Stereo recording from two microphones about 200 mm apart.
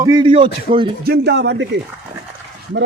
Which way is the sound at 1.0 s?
55° right (ahead or behind).